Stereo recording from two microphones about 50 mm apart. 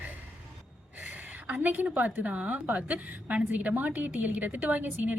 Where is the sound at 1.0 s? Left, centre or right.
Right.